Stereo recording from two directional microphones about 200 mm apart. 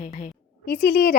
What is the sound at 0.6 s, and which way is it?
Speech, 50° left (ahead or behind).